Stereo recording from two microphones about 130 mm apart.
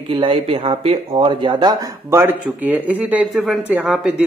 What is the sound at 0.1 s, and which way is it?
Speech, 45° right (ahead or behind).